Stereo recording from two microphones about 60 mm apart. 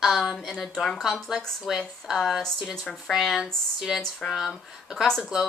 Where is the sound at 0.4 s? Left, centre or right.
Centre.